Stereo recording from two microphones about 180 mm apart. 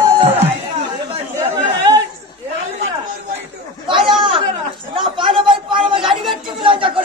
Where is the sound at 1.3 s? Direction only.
20° right (ahead or behind).